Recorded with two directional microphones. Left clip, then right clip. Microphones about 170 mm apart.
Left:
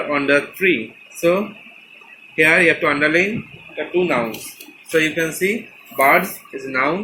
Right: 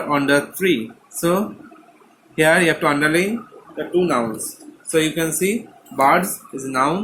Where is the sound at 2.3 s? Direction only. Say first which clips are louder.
Left 2 dB; 55° right (ahead or behind).